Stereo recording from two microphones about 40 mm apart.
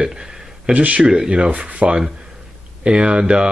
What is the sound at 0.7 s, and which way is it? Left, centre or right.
Speech, right.